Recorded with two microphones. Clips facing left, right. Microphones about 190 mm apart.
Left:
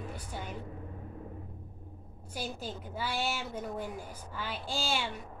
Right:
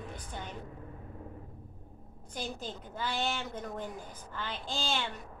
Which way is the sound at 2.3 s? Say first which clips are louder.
Left 1 dB; 10° left (ahead or behind).